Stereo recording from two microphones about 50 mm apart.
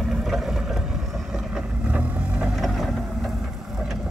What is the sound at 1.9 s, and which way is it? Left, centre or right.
Vehicle, right.